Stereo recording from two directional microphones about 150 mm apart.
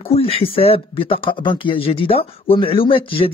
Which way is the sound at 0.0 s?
40° left (ahead or behind).